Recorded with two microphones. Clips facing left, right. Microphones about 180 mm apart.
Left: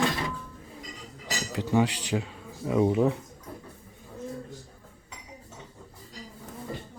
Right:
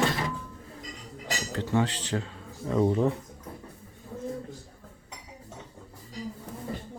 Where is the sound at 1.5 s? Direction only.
10° left (ahead or behind).